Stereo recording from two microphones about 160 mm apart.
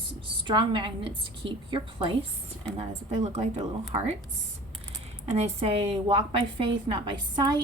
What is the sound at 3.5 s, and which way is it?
Speech, 25° right (ahead or behind).